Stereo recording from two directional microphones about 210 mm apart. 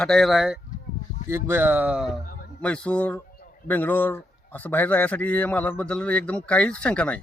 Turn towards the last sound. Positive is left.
turn(degrees=5)  # may be behind; listen again after turning